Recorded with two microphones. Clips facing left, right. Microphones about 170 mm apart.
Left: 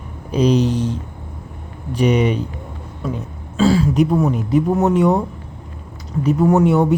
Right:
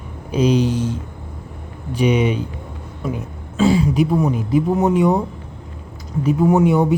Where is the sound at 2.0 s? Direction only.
Centre (ahead or behind).